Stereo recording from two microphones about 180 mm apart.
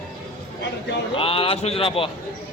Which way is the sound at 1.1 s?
30° left (ahead or behind).